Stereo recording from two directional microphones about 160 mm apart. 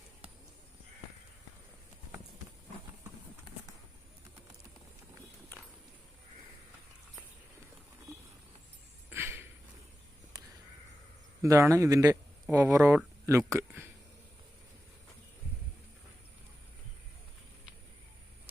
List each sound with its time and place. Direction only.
9.0 s a sound: 15° right (ahead or behind)
10.3 s crow: 25° right (ahead or behind)
11.4 s speech: 20° right (ahead or behind)